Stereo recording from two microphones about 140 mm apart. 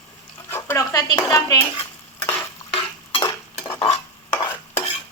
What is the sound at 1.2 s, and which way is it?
Speech, 25° left (ahead or behind).